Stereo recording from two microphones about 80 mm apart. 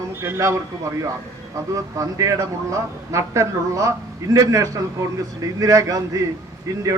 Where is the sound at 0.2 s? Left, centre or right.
Right.